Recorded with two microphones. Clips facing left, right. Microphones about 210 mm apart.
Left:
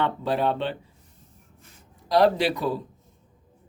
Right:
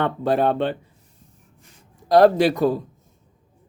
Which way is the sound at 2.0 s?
50° right (ahead or behind).